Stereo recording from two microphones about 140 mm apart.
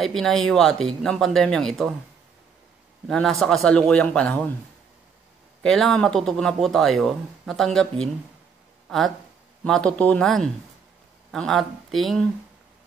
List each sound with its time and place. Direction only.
0.0 s speech: centre (ahead or behind)
3.1 s speech: centre (ahead or behind)
5.6 s speech: centre (ahead or behind)